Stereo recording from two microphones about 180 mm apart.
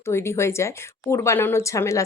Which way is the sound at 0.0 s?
15° left (ahead or behind).